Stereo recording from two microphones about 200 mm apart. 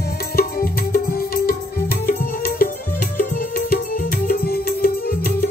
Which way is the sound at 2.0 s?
45° left (ahead or behind).